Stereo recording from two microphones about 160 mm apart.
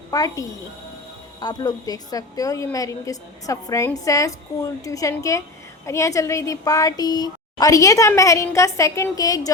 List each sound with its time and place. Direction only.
0.1 s speech: 20° left (ahead or behind)